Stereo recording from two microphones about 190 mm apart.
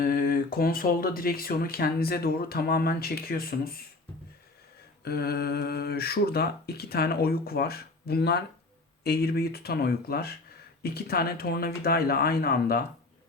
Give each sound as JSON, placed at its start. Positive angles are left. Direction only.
{"t": 0.0, "sound": "speech", "side_deg": 50}
{"t": 5.0, "sound": "speech", "side_deg": 55}